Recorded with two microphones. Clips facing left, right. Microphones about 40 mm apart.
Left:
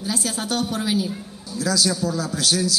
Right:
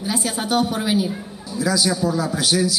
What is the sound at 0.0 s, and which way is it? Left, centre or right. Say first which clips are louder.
A woman's voice: right 2 dB; centre.